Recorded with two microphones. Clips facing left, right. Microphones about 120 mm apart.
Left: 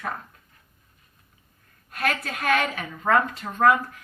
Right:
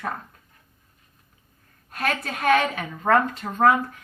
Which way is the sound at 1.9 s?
35° right (ahead or behind).